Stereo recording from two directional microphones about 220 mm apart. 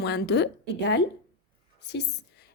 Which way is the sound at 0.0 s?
50° left (ahead or behind).